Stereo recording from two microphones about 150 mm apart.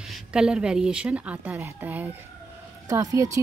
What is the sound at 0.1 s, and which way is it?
A woman's voice, 5° right (ahead or behind).